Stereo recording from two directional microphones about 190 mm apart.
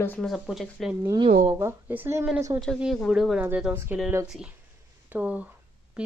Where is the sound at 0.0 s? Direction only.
5° left (ahead or behind).